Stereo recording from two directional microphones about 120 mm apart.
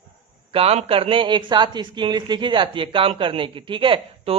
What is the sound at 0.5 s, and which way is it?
Speech, 55° right (ahead or behind).